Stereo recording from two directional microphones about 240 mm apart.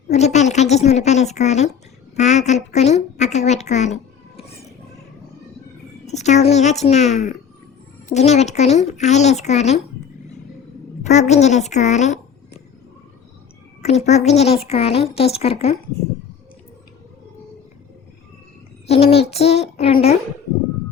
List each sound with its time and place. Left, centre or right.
0.1 s a woman's voice: left
2.1 s a sound: left
6.1 s a woman's voice: left
11.1 s a woman's voice: left
13.8 s a woman's voice: left
18.9 s a woman's voice: left